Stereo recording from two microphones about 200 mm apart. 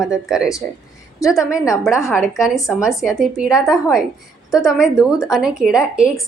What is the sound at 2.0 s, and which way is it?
Speech, centre (ahead or behind).